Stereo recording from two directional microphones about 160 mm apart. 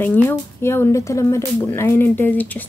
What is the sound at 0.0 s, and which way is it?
Speech, 10° left (ahead or behind).